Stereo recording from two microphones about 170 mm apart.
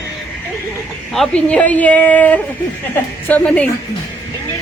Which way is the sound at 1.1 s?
5° left (ahead or behind).